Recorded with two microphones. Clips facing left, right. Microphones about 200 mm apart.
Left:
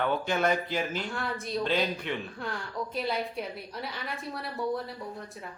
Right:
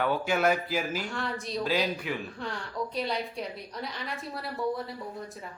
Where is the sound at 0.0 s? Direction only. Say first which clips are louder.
Right 1 dB; 10° right (ahead or behind).